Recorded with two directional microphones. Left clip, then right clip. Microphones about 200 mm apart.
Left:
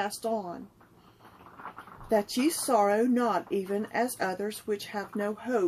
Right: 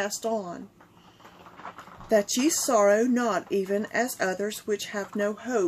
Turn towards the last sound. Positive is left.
turn(degrees=-10)  # may be behind; listen again after turning